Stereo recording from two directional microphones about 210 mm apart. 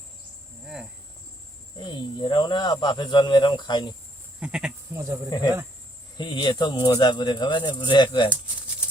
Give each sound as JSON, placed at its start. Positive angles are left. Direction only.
{"t": 0.6, "sound": "cricket", "side_deg": -5}
{"t": 1.8, "sound": "speech", "side_deg": 20}
{"t": 4.4, "sound": "speech", "side_deg": -5}
{"t": 6.1, "sound": "speech", "side_deg": 20}